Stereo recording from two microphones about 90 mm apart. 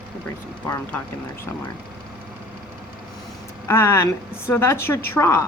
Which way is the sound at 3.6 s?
30° left (ahead or behind).